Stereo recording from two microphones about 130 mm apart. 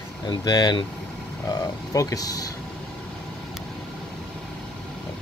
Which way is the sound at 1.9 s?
25° left (ahead or behind).